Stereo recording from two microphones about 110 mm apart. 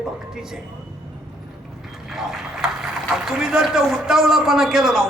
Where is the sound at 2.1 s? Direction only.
5° right (ahead or behind).